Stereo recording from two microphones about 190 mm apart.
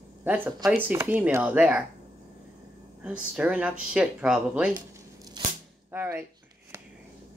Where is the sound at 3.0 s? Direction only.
5° right (ahead or behind).